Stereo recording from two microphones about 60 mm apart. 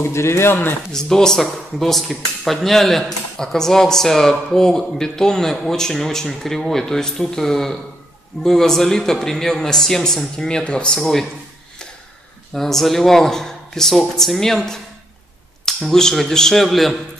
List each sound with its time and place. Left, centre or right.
0.0 s a man's voice: left
0.9 s speech: centre
11.0 s speech: centre
12.5 s speech: centre